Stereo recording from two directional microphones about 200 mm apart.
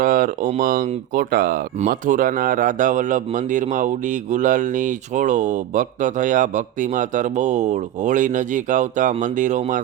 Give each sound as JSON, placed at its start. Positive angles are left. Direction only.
{"t": 0.0, "sound": "speech", "side_deg": -40}